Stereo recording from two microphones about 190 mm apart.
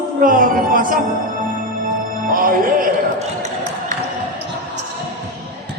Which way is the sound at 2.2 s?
45° right (ahead or behind).